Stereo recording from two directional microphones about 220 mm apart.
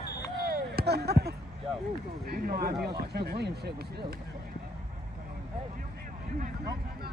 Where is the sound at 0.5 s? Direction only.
45° right (ahead or behind).